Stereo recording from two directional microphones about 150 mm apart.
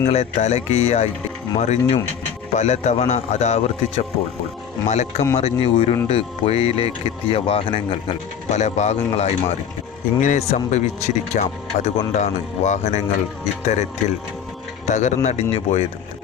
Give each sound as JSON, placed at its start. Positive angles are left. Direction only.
{"t": 0.1, "sound": "speech", "side_deg": 50}
{"t": 8.4, "sound": "speech", "side_deg": 50}
{"t": 10.2, "sound": "a man's voice", "side_deg": 60}
{"t": 10.5, "sound": "speech", "side_deg": 50}
{"t": 14.8, "sound": "speech", "side_deg": 50}